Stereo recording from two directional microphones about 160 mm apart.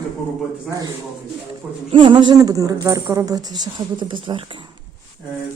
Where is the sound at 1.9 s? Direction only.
30° right (ahead or behind).